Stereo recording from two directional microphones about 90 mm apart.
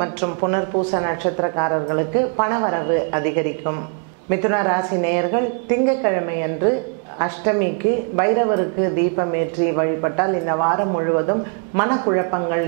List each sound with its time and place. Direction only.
0.0 s a woman's voice: 15° right (ahead or behind)